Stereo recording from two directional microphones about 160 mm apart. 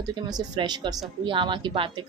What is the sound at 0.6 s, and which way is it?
Speech, 30° right (ahead or behind).